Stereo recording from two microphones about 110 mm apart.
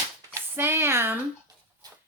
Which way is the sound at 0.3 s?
20° right (ahead or behind).